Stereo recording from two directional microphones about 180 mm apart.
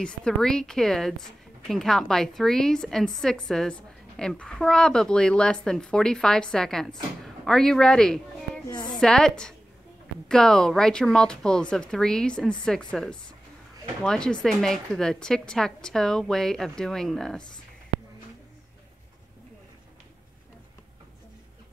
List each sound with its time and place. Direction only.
0.0 s a woman's voice: 5° left (ahead or behind)
8.6 s a sound: 25° left (ahead or behind)
8.9 s a woman's voice: 5° left (ahead or behind)